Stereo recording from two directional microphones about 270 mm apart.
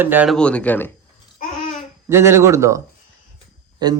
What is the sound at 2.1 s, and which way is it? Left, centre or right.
Speech, centre.